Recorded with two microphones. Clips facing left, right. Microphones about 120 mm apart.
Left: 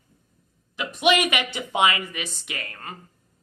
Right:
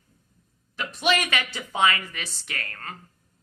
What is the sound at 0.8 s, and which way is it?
A woman's voice, 15° left (ahead or behind).